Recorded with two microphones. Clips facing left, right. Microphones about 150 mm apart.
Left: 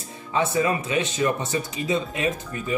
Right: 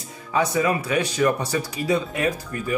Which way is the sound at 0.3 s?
30° left (ahead or behind).